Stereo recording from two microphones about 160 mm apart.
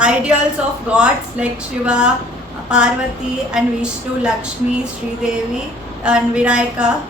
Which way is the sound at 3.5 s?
5° right (ahead or behind).